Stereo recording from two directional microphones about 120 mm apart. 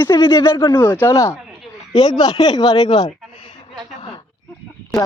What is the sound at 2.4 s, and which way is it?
Speech, 35° left (ahead or behind).